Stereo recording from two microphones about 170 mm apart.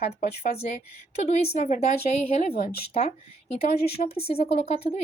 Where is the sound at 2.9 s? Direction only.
35° left (ahead or behind).